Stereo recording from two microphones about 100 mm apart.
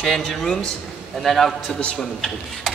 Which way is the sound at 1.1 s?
Centre (ahead or behind).